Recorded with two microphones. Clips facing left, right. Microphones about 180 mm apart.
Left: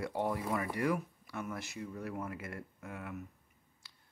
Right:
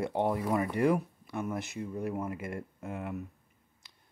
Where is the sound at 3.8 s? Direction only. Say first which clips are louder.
Right 2 dB; 20° right (ahead or behind).